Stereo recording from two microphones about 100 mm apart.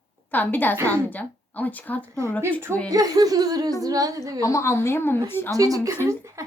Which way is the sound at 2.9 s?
35° right (ahead or behind).